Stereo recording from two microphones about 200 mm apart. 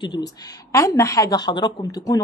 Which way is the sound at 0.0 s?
20° left (ahead or behind).